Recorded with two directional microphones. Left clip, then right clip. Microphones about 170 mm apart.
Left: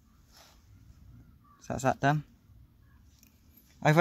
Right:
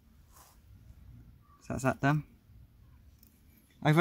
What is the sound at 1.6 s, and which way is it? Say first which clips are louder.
Speech: left 3 dB; 15° left (ahead or behind).